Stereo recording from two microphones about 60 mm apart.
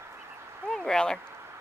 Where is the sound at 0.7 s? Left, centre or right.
Centre.